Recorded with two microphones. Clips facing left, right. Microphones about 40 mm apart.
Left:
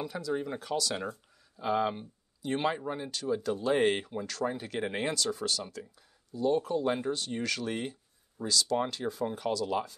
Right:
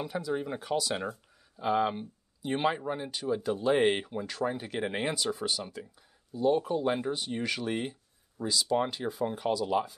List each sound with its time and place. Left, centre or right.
0.0 s speech: centre